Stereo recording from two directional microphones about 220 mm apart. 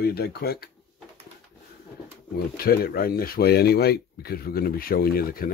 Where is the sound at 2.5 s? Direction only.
45° left (ahead or behind).